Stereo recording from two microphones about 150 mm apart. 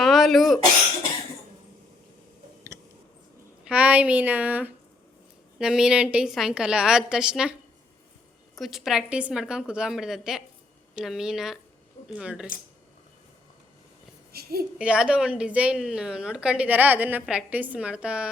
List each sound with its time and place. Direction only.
0.0 s cough: centre (ahead or behind)
2.7 s a sound: 20° right (ahead or behind)
3.6 s a woman's voice: 10° right (ahead or behind)
8.5 s a woman's voice: centre (ahead or behind)
14.3 s a sound: 90° right
14.8 s a woman's voice: 5° right (ahead or behind)